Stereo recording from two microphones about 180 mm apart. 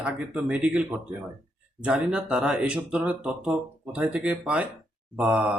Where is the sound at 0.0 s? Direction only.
5° right (ahead or behind).